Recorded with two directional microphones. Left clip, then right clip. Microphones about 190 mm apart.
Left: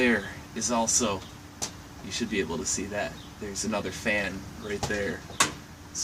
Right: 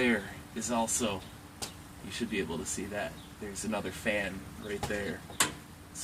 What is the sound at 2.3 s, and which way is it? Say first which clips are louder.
Speech: left 6 dB; centre (ahead or behind).